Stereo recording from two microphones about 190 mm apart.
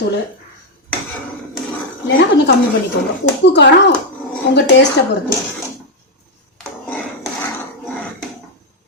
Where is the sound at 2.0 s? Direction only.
80° left.